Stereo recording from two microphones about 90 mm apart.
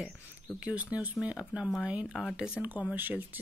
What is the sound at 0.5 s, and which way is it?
Speech, 15° right (ahead or behind).